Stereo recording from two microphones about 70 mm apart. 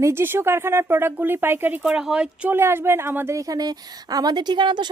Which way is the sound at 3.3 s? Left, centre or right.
Right.